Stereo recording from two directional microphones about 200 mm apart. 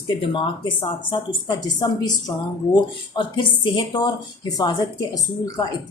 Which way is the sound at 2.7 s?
20° left (ahead or behind).